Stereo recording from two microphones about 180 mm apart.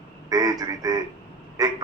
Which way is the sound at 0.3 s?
20° right (ahead or behind).